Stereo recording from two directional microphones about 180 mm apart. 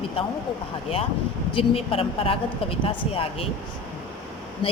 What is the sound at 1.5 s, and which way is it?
Speech, 30° left (ahead or behind).